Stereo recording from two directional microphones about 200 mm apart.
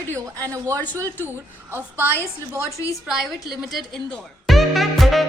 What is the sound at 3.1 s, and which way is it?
Music, centre (ahead or behind).